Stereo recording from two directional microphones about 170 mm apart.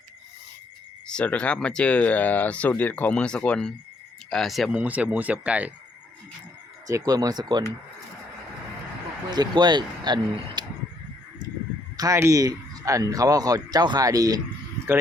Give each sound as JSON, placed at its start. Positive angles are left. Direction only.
{"t": 1.0, "sound": "speech", "side_deg": 5}
{"t": 6.8, "sound": "speech", "side_deg": -20}
{"t": 9.3, "sound": "speech", "side_deg": -25}
{"t": 11.9, "sound": "speech", "side_deg": -20}